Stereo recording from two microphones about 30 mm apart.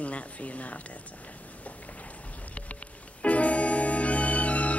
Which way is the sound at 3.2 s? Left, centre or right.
Left.